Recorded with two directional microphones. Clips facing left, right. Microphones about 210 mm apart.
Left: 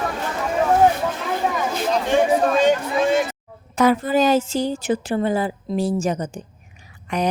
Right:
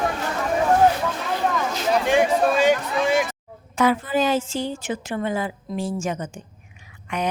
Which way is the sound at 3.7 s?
40° left (ahead or behind).